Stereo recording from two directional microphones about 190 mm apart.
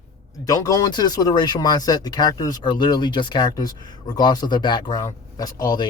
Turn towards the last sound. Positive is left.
turn(degrees=20)  # may be behind; listen again after turning